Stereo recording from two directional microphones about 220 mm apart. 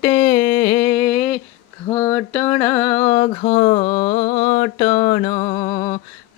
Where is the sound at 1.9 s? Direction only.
15° left (ahead or behind).